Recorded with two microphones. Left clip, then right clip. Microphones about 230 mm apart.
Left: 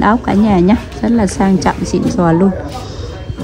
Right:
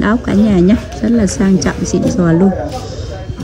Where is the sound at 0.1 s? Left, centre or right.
Left.